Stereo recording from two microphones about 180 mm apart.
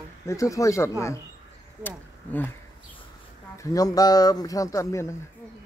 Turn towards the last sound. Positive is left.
turn(degrees=15)  # may be behind; listen again after turning